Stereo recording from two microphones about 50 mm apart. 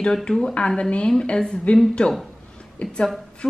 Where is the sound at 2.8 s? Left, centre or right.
Centre.